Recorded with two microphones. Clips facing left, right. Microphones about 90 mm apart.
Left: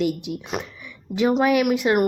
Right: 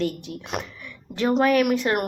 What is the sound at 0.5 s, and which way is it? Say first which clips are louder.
A woman's voice: left 1 dB; centre (ahead or behind).